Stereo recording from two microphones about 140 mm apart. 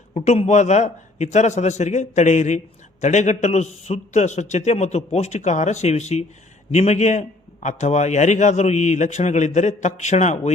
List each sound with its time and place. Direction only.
0.1 s a man's voice: 50° left (ahead or behind)